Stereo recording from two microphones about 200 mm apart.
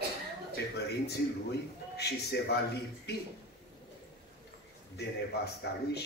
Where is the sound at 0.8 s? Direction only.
55° left (ahead or behind).